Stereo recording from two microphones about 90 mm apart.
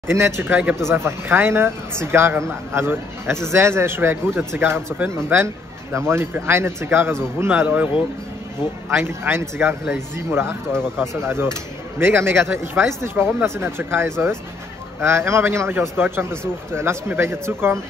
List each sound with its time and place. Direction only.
0.1 s a man's voice: 30° right (ahead or behind)
8.9 s a man's voice: 25° right (ahead or behind)